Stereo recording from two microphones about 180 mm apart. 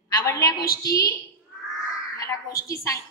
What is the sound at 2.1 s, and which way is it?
Speech, 20° left (ahead or behind).